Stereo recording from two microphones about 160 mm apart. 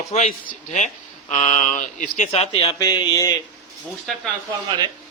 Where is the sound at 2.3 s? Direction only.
35° left (ahead or behind).